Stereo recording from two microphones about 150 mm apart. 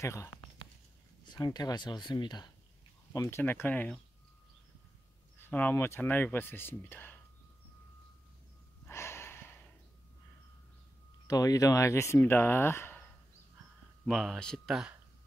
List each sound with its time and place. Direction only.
0.0 s speech: 20° left (ahead or behind)
1.2 s speech: 30° left (ahead or behind)
3.1 s speech: 20° left (ahead or behind)
5.4 s speech: 10° left (ahead or behind)
8.8 s a sound: 15° left (ahead or behind)
11.2 s speech: 25° left (ahead or behind)
14.0 s speech: centre (ahead or behind)